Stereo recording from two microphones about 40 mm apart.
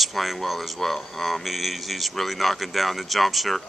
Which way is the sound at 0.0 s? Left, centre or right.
Centre.